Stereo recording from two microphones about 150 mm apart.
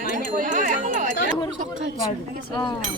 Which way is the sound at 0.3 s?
65° right (ahead or behind).